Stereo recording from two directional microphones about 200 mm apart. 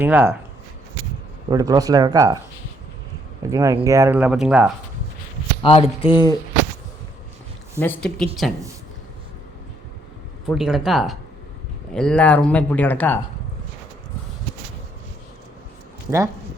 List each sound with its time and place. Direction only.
0.0 s speech: 10° right (ahead or behind)
1.5 s speech: 20° right (ahead or behind)
3.5 s speech: 15° right (ahead or behind)
5.6 s mechanisms: 30° left (ahead or behind)
7.8 s speech: 5° left (ahead or behind)
10.4 s speech: centre (ahead or behind)
16.0 s speech: 15° right (ahead or behind)